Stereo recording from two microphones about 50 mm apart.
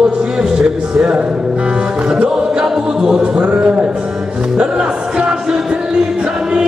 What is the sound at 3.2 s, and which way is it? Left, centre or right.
Speech, centre.